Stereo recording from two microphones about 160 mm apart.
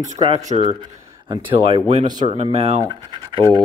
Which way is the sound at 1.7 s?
35° right (ahead or behind).